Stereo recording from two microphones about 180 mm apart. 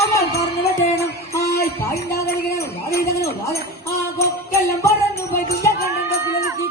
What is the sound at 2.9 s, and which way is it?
Jingle bell, 60° left (ahead or behind).